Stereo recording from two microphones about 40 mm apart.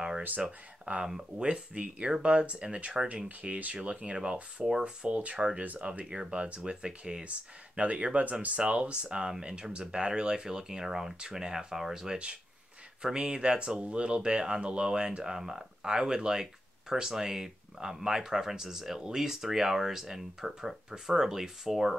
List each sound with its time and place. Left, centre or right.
0.5 s speech: right
3.4 s speech: right; by 7.2 s centre
7.2 s speech: right; by 12.2 s centre
13.0 s speech: right